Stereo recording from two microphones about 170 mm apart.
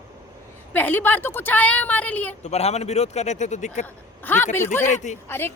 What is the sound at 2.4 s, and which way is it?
A man's voice, 40° left (ahead or behind).